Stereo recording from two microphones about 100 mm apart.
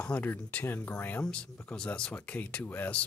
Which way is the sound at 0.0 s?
15° left (ahead or behind).